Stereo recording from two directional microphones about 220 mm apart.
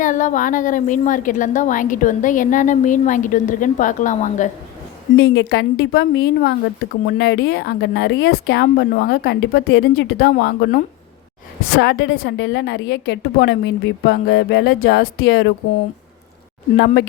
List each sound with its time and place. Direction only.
0.0 s a woman's voice: 35° left (ahead or behind)
5.1 s speech: 55° left (ahead or behind)
11.8 s speech: 50° left (ahead or behind)
16.7 s speech: 45° left (ahead or behind)